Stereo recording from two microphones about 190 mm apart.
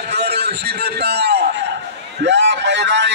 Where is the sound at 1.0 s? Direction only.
60° right (ahead or behind).